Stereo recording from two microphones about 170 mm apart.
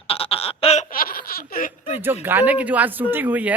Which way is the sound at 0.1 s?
35° left (ahead or behind).